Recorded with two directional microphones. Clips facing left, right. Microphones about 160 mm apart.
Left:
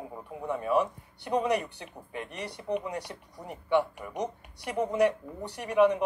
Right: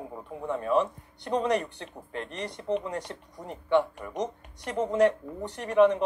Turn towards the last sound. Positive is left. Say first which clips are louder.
# right 2 dB
turn(degrees=10)  # may be behind; listen again after turning